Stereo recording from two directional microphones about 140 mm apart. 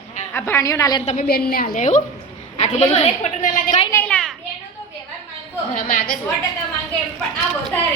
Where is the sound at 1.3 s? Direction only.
90° left; by 2.0 s 60° left (ahead or behind).